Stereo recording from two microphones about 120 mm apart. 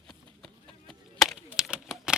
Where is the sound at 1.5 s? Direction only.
10° right (ahead or behind).